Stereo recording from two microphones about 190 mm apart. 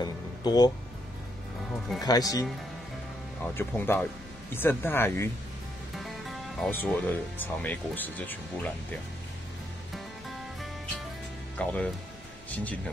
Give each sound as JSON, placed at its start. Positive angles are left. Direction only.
{"t": 0.0, "sound": "music", "side_deg": 20}
{"t": 2.0, "sound": "speech", "side_deg": 20}
{"t": 3.4, "sound": "speech", "side_deg": 10}
{"t": 5.9, "sound": "music", "side_deg": 0}
{"t": 6.7, "sound": "speech", "side_deg": 10}
{"t": 11.5, "sound": "speech", "side_deg": 5}